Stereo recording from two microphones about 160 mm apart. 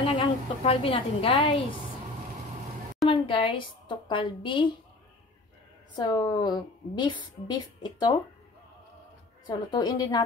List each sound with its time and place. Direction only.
0.0 s a sound: 35° left (ahead or behind)
3.1 s a woman's voice: 35° left (ahead or behind)
5.9 s a woman's voice: 25° left (ahead or behind)
9.5 s a woman's voice: 25° left (ahead or behind)